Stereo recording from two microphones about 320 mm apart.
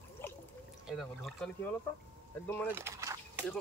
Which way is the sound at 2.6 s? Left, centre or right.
Centre.